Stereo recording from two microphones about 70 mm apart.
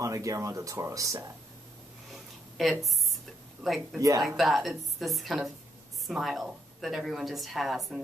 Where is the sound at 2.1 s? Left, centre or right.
Centre.